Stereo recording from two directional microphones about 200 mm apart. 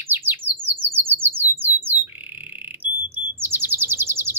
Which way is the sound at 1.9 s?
45° left (ahead or behind).